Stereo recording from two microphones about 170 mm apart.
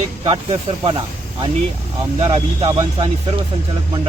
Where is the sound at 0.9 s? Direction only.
30° right (ahead or behind).